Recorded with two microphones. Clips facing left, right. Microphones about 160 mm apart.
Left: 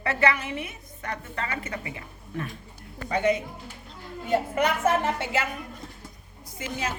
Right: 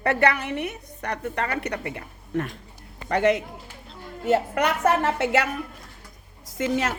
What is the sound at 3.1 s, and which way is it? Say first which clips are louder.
A woman's voice: right 3 dB; 75° right (ahead or behind).